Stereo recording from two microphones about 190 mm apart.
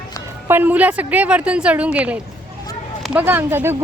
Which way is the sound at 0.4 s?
10° right (ahead or behind).